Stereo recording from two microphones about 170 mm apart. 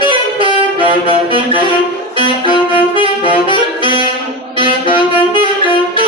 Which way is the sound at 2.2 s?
30° left (ahead or behind).